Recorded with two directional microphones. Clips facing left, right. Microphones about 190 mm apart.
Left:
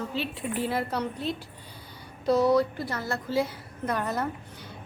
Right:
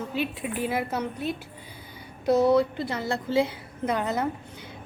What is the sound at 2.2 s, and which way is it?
A woman's voice, 25° right (ahead or behind).